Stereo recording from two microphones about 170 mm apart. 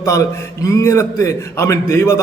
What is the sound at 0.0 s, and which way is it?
A man's voice, 20° left (ahead or behind).